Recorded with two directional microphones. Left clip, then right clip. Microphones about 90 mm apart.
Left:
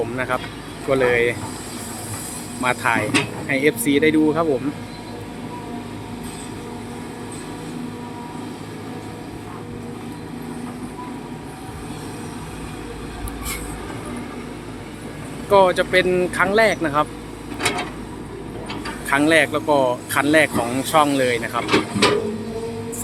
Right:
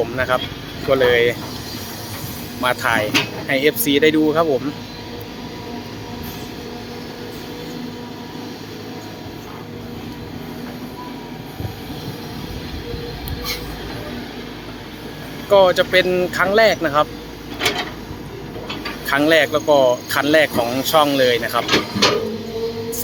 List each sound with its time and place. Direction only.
0.2 s speech: 15° right (ahead or behind)
2.6 s speech: 15° right (ahead or behind)
15.4 s speech: 10° right (ahead or behind)
17.6 s a sound: centre (ahead or behind)
19.0 s speech: 15° right (ahead or behind)
21.6 s speech: 55° right (ahead or behind)